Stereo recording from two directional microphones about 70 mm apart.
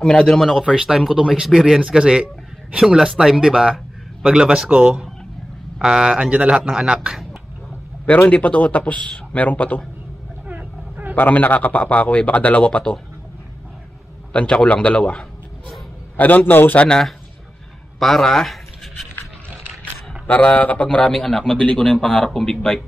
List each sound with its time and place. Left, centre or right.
0.0 s a man's voice: centre
0.5 s a man's voice: centre
8.3 s a man's voice: left
10.4 s vehicle: right
11.1 s a man's voice: left
14.3 s a man's voice: centre
16.2 s a man's voice: left
17.9 s speech: centre
19.8 s a man's voice: left